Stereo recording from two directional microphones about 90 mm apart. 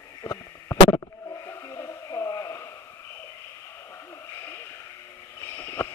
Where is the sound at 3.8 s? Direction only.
30° left (ahead or behind).